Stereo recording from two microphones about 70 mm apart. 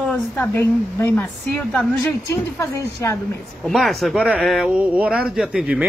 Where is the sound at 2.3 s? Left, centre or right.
Left.